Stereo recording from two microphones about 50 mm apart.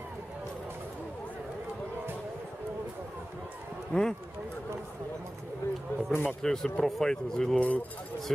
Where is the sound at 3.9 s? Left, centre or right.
Centre.